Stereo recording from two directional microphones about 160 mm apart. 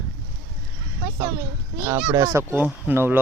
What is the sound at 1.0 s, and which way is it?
Speech, 15° right (ahead or behind).